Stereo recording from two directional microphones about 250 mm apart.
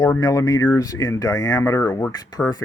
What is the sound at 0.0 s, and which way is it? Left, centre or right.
Speech, centre.